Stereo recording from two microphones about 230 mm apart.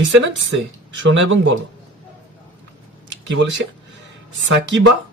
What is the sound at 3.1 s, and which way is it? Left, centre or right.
Speech, right.